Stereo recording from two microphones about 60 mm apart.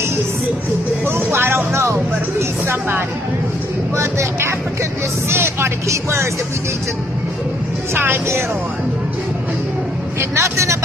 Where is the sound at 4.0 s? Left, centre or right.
Right.